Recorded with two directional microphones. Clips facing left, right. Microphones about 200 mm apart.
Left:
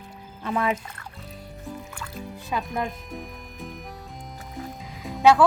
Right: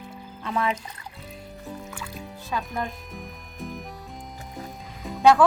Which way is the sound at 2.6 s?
Centre (ahead or behind).